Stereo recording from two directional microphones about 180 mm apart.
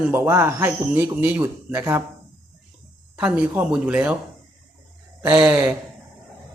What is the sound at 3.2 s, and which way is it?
Speech, 10° right (ahead or behind).